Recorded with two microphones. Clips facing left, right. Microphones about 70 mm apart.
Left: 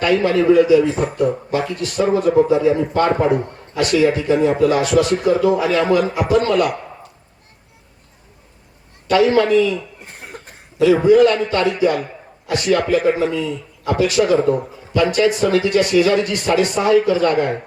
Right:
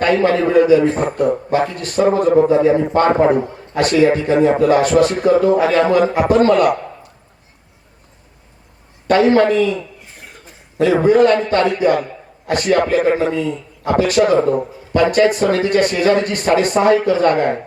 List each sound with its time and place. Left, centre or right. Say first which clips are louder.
0.0 s a man's voice: right 1 dB; right
9.0 s a man's voice: right 2 dB; right
10.1 s cough: left 4 dB; left
10.8 s a man's voice: even; right